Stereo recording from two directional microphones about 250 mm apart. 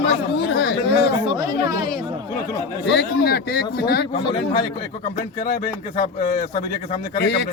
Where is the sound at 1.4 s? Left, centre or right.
Centre.